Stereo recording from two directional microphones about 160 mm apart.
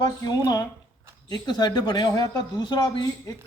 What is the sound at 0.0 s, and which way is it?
A man's voice, 25° left (ahead or behind).